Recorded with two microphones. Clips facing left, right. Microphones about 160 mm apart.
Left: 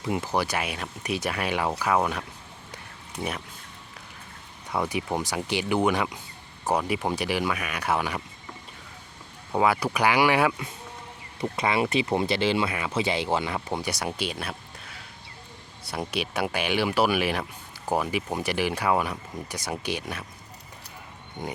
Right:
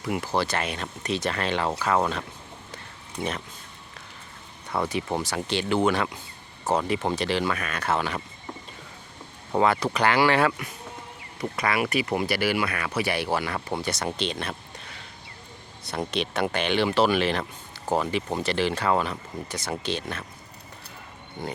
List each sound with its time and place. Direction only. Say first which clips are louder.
0.0 s speech: even; 20° left (ahead or behind)
4.7 s speech: right 1 dB; 10° left (ahead or behind)
9.6 s speech: right 1 dB; 10° left (ahead or behind)
11.3 s speech: left 1 dB; 25° left (ahead or behind)
21.4 s speech: right 1 dB; 15° left (ahead or behind)